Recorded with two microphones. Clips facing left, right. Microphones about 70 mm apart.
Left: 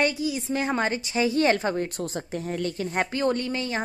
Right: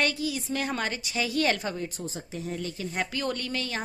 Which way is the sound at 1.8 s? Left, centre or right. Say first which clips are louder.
Left 6 dB; left.